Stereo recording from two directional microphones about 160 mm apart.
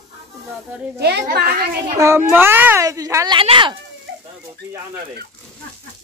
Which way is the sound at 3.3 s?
30° right (ahead or behind).